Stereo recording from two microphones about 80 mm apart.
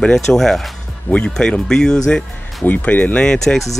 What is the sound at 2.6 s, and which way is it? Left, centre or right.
Speech, centre.